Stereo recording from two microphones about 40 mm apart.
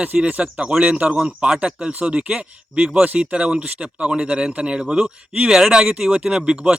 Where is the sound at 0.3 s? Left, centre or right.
Right.